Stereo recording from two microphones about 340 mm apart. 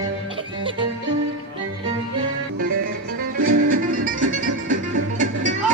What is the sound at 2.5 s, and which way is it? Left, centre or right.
Music, right.